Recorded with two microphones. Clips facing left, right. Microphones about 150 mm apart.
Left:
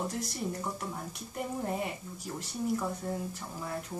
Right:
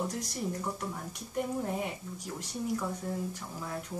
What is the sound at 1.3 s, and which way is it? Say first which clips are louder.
Speech: right 2 dB; centre (ahead or behind).